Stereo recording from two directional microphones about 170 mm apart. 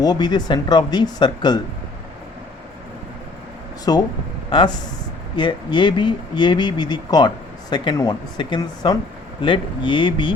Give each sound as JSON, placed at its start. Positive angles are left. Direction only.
{"t": 0.0, "sound": "speech", "side_deg": 25}
{"t": 3.9, "sound": "speech", "side_deg": 25}